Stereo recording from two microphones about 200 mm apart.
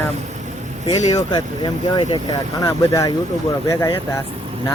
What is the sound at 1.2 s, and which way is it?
Speech, 20° left (ahead or behind).